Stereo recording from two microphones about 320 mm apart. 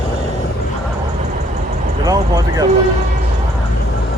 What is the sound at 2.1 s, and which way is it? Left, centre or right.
Speech, centre.